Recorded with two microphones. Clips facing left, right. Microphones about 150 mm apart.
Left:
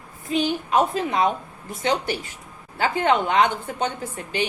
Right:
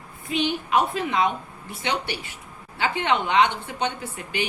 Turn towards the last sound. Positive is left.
turn(degrees=35)  # may be behind; listen again after turning